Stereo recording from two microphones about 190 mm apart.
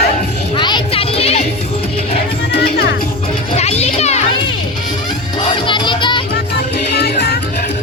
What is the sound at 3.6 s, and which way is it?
Children playing, 35° left (ahead or behind).